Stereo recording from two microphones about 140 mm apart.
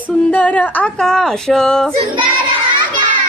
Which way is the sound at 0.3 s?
10° left (ahead or behind).